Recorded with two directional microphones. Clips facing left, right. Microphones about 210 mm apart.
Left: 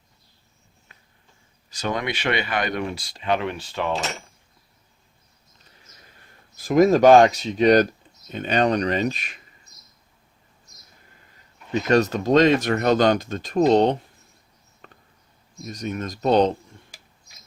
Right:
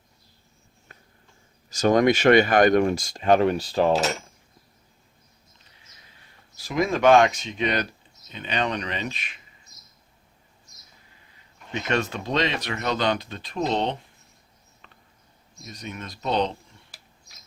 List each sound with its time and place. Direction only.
0.9 s a sound: 40° right (ahead or behind)
1.7 s speech: 45° right (ahead or behind)
3.9 s speech: centre (ahead or behind)
6.1 s speech: 50° left (ahead or behind)
11.7 s speech: 40° left (ahead or behind)
14.8 s a sound: 45° left (ahead or behind)
15.6 s speech: 45° left (ahead or behind)